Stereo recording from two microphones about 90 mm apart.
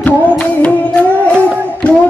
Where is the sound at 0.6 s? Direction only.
15° left (ahead or behind).